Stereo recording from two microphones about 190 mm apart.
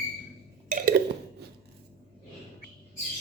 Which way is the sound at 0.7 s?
50° right (ahead or behind).